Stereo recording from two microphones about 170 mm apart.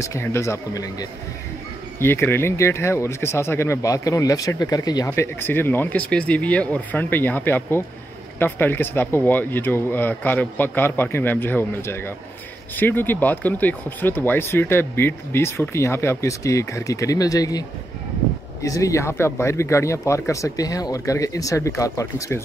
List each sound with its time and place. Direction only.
0.0 s speech: 15° left (ahead or behind)